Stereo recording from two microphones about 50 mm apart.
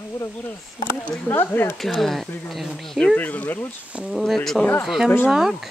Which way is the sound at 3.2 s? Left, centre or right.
Left.